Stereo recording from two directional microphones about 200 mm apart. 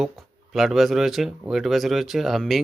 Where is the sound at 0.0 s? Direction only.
Centre (ahead or behind).